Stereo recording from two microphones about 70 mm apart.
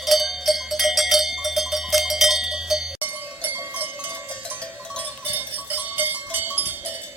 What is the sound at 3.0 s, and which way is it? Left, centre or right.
Cowbell, right.